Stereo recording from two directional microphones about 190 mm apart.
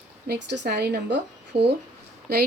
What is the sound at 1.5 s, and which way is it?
Speech, 30° right (ahead or behind).